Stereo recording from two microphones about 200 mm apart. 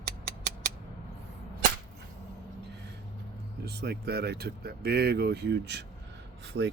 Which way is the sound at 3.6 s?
55° right (ahead or behind).